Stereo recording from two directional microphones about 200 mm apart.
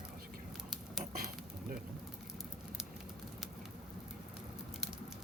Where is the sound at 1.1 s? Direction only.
45° right (ahead or behind).